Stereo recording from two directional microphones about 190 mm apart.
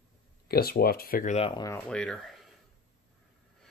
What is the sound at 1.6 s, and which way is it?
Speech, 10° left (ahead or behind).